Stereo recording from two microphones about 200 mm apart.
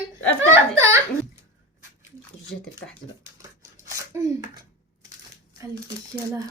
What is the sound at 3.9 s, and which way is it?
Speech, 15° right (ahead or behind).